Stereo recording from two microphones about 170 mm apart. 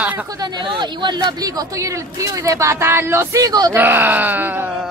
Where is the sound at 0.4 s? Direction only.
25° right (ahead or behind); by 4.6 s 10° right (ahead or behind).